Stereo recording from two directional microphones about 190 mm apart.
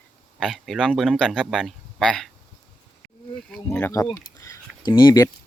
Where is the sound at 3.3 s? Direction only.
5° left (ahead or behind).